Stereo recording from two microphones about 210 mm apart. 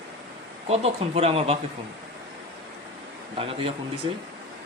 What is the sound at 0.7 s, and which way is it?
Speech, 30° right (ahead or behind).